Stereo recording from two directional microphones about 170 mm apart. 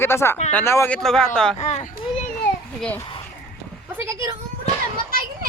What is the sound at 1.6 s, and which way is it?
Speech, 40° left (ahead or behind).